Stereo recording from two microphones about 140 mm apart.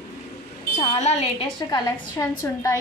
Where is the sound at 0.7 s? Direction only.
55° left (ahead or behind).